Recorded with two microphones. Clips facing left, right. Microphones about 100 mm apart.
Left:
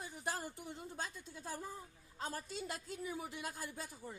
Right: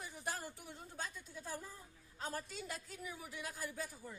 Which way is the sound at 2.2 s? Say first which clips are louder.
Left 1 dB; 35° left (ahead or behind).